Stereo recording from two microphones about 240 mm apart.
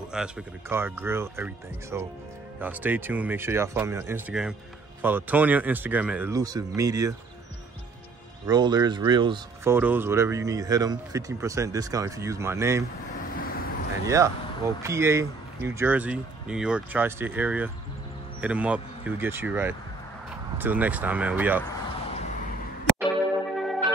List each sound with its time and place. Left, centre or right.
0.1 s speech: centre
8.5 s speech: centre
9.8 s speech: centre
13.1 s vehicle: left
14.0 s speech: centre
23.5 s music: centre